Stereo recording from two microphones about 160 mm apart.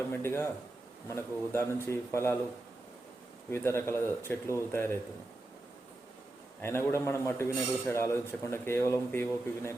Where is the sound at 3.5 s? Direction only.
15° left (ahead or behind).